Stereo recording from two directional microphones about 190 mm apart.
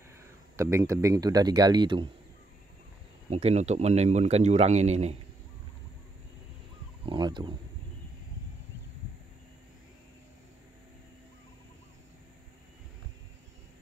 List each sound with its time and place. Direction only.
0.2 s speech: 15° right (ahead or behind)
3.3 s speech: 35° right (ahead or behind)
7.1 s speech: 25° right (ahead or behind)